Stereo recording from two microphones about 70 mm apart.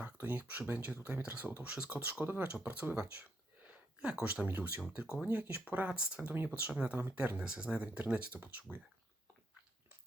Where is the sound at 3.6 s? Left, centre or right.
Centre.